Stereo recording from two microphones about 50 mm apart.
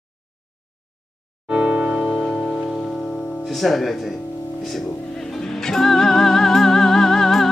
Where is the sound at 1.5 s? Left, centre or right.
Right.